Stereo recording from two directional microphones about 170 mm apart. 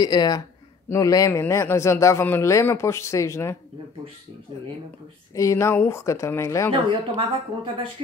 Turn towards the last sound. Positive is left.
turn(degrees=-30)  # may be behind; listen again after turning